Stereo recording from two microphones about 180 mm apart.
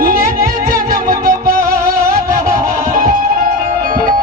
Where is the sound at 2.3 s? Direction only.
50° right (ahead or behind).